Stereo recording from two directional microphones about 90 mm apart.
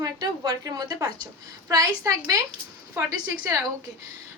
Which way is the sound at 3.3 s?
35° right (ahead or behind).